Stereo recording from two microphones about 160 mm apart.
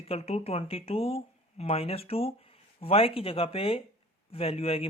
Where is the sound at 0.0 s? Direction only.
40° left (ahead or behind).